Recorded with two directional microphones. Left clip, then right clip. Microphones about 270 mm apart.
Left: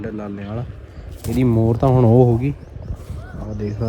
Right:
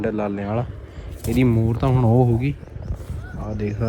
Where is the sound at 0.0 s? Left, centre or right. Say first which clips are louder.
Right 6 dB; centre.